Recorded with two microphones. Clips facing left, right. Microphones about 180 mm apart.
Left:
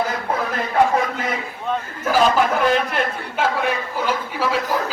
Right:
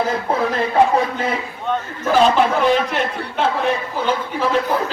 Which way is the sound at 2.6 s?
5° left (ahead or behind).